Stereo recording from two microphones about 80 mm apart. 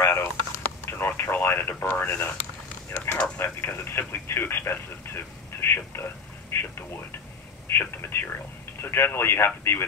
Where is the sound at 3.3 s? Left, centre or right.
Left.